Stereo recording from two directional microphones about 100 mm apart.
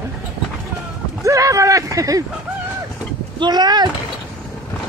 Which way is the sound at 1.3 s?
30° right (ahead or behind).